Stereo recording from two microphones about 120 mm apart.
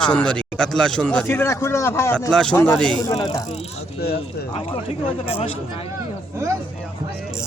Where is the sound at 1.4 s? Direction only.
25° left (ahead or behind).